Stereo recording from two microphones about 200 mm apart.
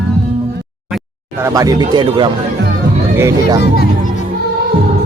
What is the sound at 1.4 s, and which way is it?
Speech, 15° right (ahead or behind).